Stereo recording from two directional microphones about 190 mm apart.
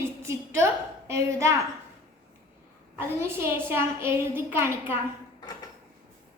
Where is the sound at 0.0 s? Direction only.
15° right (ahead or behind).